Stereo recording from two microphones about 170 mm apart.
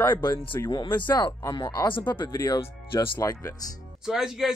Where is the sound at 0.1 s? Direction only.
25° left (ahead or behind).